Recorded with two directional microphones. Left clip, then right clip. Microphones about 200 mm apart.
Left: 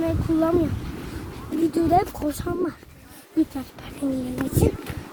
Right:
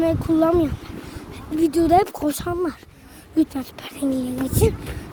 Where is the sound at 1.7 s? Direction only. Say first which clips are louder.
Right 4 dB; 50° right (ahead or behind).